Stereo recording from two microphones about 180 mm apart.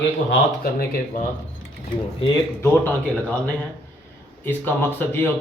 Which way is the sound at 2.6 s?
10° left (ahead or behind).